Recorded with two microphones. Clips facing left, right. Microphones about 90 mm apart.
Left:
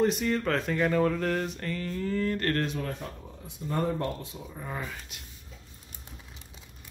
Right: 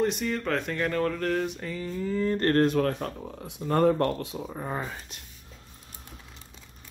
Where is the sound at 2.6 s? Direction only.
60° right (ahead or behind); by 4.4 s 80° right.